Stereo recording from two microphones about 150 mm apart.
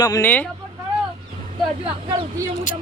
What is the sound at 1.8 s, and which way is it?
Speech, 35° right (ahead or behind).